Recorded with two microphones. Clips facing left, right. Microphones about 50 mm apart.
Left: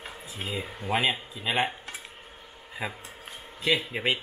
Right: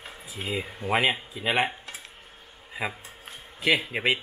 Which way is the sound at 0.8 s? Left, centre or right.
Right.